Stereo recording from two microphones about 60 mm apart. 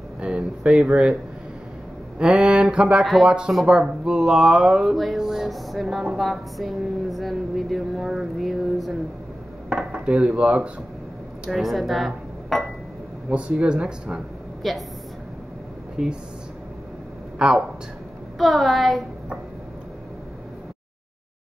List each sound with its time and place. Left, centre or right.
0.2 s music: centre
2.1 s a sound: centre
3.3 s music: centre
6.1 s a woman's voice: centre
9.7 s dishes: centre
11.5 s speech: centre
13.3 s music: centre
14.6 s a woman's voice: centre
16.0 s speech: centre
17.4 s speech: centre
18.4 s a woman's voice: centre